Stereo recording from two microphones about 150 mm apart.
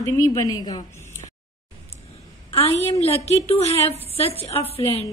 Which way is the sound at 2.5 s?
45° left (ahead or behind).